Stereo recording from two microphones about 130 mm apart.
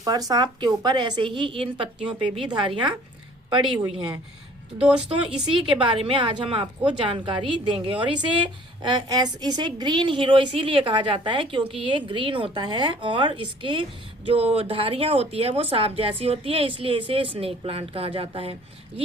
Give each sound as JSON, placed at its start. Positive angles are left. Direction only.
{"t": 0.0, "sound": "a woman's voice", "side_deg": -30}
{"t": 4.8, "sound": "speech", "side_deg": -10}
{"t": 5.0, "sound": "a woman's voice", "side_deg": -40}